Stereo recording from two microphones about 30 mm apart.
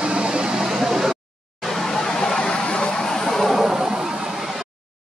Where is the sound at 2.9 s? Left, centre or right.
Centre.